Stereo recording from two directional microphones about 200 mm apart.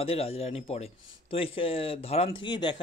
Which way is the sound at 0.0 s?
30° left (ahead or behind).